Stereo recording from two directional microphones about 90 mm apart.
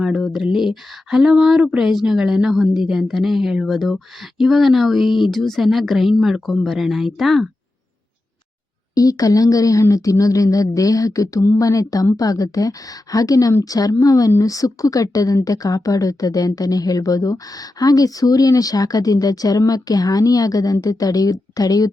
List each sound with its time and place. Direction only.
0.0 s speech: 5° right (ahead or behind)
9.0 s a woman's voice: 40° left (ahead or behind)